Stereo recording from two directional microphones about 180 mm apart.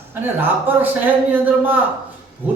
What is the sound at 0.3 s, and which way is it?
Speech, 10° right (ahead or behind).